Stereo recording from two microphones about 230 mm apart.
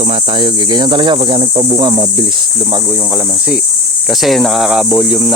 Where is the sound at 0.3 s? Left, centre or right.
Centre.